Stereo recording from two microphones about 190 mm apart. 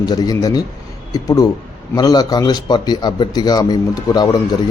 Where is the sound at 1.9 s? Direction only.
20° left (ahead or behind).